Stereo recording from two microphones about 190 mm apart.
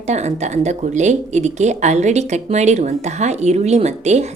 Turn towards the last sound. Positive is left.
turn(degrees=-35)  # may be behind; listen again after turning